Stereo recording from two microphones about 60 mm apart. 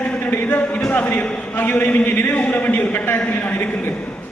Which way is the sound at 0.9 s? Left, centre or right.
Left.